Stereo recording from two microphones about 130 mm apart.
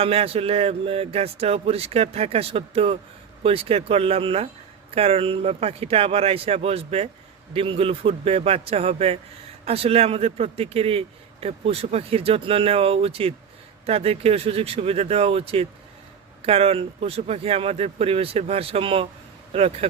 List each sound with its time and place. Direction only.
0.0 s a man's voice: 50° right (ahead or behind)